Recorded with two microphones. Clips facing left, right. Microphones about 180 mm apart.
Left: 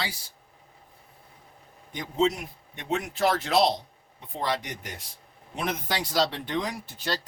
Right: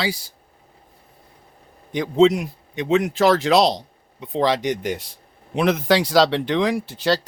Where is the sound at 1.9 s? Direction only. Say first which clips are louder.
Right 10 dB; 90° right.